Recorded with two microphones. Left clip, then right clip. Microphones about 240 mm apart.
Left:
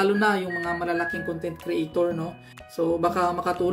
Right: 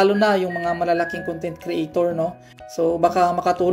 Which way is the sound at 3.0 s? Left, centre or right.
Centre.